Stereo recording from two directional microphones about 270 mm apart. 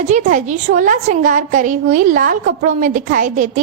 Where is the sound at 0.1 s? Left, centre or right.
Right.